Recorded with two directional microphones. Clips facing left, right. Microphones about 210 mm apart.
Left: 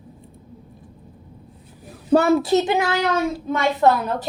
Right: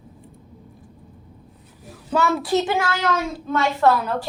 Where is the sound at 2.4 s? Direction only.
20° left (ahead or behind).